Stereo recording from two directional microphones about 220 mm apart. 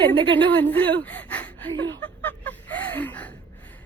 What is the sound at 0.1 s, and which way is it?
Speech, 25° right (ahead or behind).